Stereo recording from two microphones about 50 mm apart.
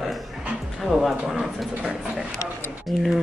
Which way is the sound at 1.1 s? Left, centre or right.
Centre.